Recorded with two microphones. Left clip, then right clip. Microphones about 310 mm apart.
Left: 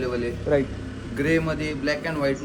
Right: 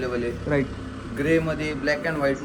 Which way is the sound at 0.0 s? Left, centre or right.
Centre.